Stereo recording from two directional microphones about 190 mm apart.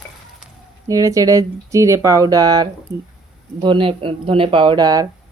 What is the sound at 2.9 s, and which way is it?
Speech, 65° right (ahead or behind).